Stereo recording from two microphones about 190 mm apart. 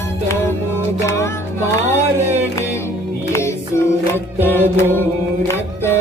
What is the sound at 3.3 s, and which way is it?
Singing, 15° left (ahead or behind).